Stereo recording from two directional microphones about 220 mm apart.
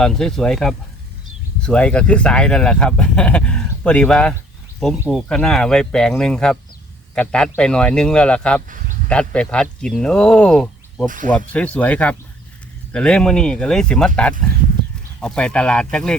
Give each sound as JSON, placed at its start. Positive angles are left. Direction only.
{"t": 0.0, "sound": "speech", "side_deg": 0}
{"t": 11.0, "sound": "speech", "side_deg": -35}
{"t": 11.3, "sound": "speech", "side_deg": 5}
{"t": 15.2, "sound": "speech", "side_deg": 5}